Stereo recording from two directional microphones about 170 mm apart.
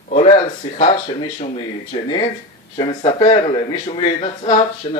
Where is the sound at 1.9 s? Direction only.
30° left (ahead or behind).